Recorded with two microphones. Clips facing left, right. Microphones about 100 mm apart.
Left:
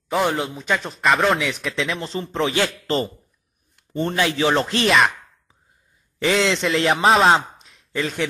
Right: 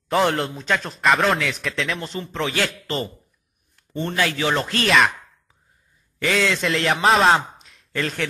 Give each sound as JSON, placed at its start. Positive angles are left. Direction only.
{"t": 0.1, "sound": "a man's voice", "side_deg": 5}
{"t": 2.0, "sound": "a man's voice", "side_deg": 30}
{"t": 3.7, "sound": "chopping", "side_deg": 25}
{"t": 4.8, "sound": "a man's voice", "side_deg": 0}
{"t": 6.1, "sound": "a man's voice", "side_deg": 25}
{"t": 6.6, "sound": "a man's voice", "side_deg": 0}
{"t": 7.5, "sound": "a sound", "side_deg": 0}